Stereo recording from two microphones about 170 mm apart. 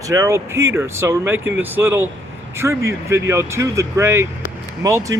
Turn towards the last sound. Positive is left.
turn(degrees=-20)  # may be behind; listen again after turning